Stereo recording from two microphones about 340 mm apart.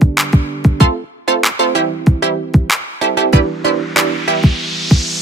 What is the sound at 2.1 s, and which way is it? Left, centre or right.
Music, centre.